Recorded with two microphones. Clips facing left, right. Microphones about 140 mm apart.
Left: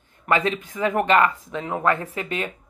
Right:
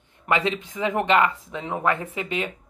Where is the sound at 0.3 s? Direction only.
25° right (ahead or behind).